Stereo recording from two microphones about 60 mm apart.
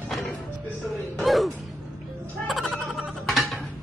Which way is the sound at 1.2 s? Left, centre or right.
Centre.